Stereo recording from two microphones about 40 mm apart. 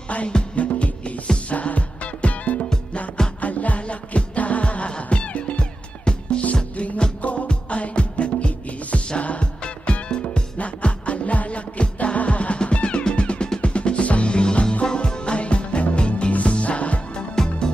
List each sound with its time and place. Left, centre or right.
0.3 s music: left
17.4 s music: centre